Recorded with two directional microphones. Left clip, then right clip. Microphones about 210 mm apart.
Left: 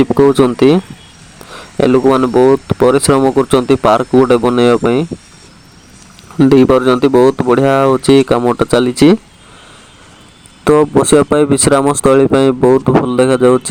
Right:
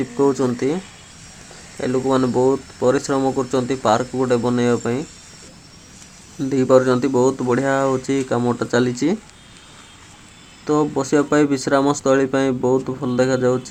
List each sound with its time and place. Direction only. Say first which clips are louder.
0.0 s speech: left 9 dB; 45° left (ahead or behind)
1.8 s speech: left 9 dB; 40° left (ahead or behind)
6.4 s speech: left 7 dB; 40° left (ahead or behind)
10.8 s speech: left 8 dB; 50° left (ahead or behind)